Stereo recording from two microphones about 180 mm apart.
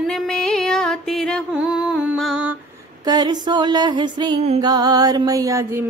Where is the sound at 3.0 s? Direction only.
20° right (ahead or behind).